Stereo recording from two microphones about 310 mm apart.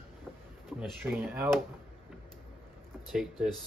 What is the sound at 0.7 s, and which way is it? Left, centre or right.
Speech, centre.